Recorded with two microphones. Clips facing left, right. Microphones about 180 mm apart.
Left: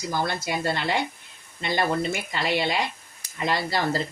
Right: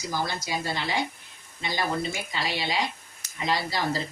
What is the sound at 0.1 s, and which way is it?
Speech, 55° left (ahead or behind).